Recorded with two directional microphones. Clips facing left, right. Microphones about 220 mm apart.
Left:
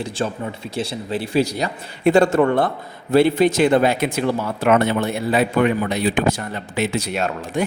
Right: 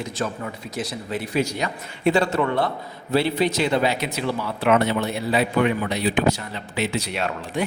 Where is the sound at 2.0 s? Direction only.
50° left (ahead or behind).